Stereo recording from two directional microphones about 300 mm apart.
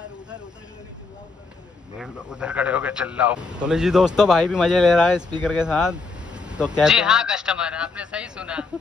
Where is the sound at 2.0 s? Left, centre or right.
Centre.